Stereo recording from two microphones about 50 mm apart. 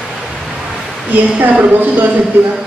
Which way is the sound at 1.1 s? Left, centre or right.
Right.